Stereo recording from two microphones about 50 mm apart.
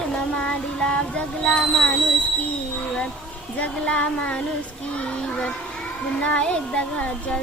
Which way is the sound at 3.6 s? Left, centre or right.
Left.